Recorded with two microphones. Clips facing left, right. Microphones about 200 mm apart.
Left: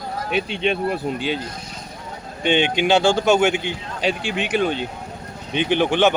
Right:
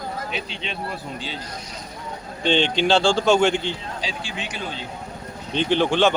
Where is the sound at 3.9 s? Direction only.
60° left (ahead or behind).